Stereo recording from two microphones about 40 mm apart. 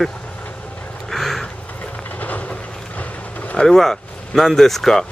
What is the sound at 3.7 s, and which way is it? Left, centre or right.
Speech, centre.